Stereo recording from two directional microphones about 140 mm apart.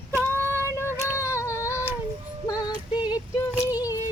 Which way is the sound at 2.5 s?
30° left (ahead or behind).